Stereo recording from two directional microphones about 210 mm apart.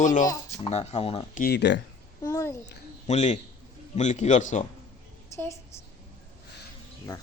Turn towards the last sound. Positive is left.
turn(degrees=15)  # may be behind; listen again after turning